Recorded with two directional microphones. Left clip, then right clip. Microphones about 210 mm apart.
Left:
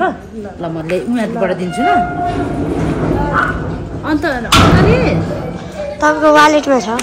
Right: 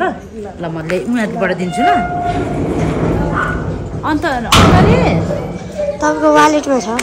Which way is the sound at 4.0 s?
Centre (ahead or behind).